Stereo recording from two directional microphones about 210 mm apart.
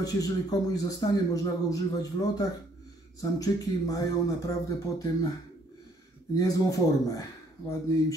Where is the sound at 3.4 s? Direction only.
15° left (ahead or behind).